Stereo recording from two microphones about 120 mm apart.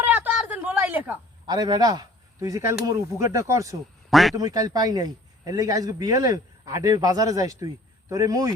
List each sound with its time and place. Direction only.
0.0 s a sound: 15° right (ahead or behind)
1.5 s speech: 35° right (ahead or behind)
4.1 s a man's voice: centre (ahead or behind)
4.4 s a man's voice: 30° right (ahead or behind)